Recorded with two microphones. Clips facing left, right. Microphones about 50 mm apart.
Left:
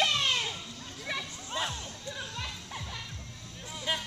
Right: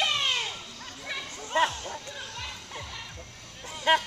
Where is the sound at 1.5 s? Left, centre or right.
Right.